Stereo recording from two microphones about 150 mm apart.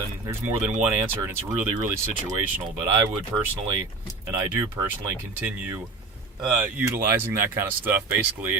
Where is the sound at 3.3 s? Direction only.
15° right (ahead or behind).